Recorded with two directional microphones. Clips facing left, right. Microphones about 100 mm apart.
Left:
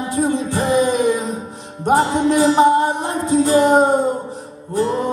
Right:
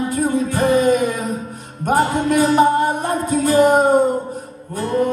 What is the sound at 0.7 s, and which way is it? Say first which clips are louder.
Music: even; 20° left (ahead or behind).